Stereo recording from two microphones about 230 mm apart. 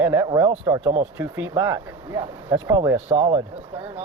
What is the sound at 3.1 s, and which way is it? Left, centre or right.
Speech, right.